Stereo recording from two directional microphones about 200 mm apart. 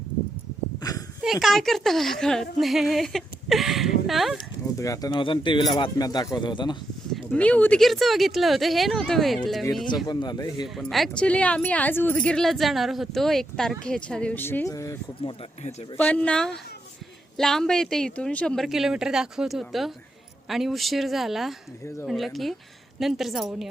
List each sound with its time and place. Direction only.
0.8 s a sound: 20° left (ahead or behind)
1.2 s a woman's voice: centre (ahead or behind)
4.8 s speech: 15° left (ahead or behind)
7.1 s speech: 5° left (ahead or behind)
10.1 s speech: 20° left (ahead or behind)
10.8 s speech: centre (ahead or behind); by 15.7 s 25° left (ahead or behind)
16.0 s speech: 5° left (ahead or behind)